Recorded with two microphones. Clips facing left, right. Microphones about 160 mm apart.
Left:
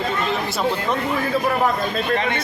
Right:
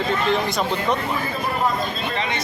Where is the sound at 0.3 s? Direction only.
5° left (ahead or behind).